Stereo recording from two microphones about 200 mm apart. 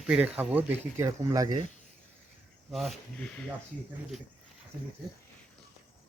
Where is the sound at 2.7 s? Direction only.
Centre (ahead or behind).